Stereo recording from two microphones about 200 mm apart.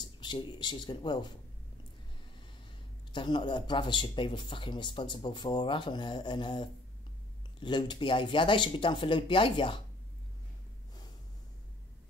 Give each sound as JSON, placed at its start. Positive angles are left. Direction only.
{"t": 0.0, "sound": "speech", "side_deg": 20}
{"t": 3.1, "sound": "speech", "side_deg": 20}